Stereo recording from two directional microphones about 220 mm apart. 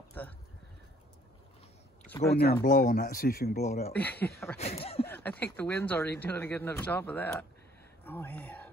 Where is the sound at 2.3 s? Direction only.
45° left (ahead or behind).